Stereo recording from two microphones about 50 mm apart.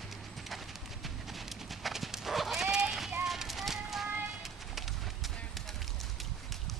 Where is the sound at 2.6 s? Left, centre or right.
Centre.